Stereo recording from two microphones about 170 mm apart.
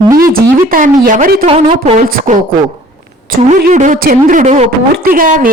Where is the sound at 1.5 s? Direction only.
35° right (ahead or behind).